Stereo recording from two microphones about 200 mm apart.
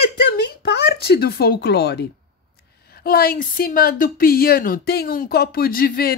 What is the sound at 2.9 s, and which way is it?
A woman's voice, 50° left (ahead or behind).